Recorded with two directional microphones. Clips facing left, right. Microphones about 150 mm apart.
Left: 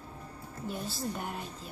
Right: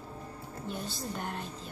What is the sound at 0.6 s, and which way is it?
Speech, 5° left (ahead or behind).